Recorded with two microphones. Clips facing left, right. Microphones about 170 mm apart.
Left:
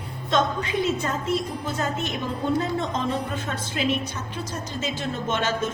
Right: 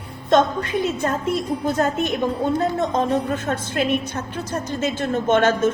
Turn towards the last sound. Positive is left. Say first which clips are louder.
# right 8 dB
turn(degrees=-55)  # may be behind; listen again after turning